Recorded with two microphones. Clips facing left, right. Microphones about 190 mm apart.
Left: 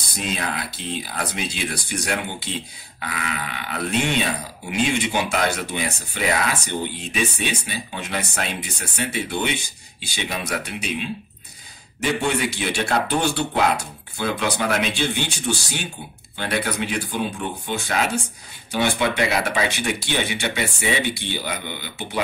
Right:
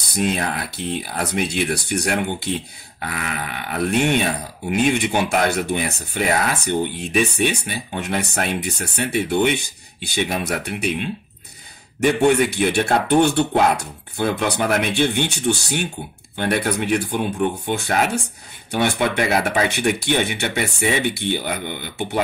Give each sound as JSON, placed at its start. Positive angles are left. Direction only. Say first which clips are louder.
{"t": 0.0, "sound": "speech", "louder": "right 6 dB", "side_deg": -60}